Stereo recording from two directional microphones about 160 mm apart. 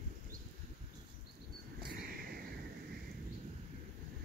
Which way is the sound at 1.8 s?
75° right (ahead or behind).